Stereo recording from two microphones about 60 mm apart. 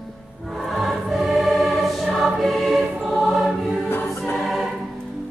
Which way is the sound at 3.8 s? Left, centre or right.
Left.